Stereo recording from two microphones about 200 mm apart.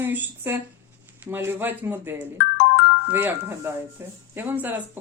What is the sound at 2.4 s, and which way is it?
Ringtone, 60° left (ahead or behind).